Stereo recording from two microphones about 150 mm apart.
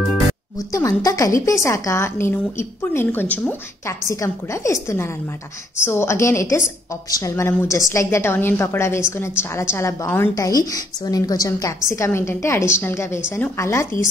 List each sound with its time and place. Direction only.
0.7 s a woman's voice: 25° left (ahead or behind)